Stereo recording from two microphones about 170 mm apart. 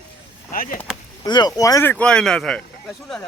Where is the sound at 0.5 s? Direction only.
55° left (ahead or behind).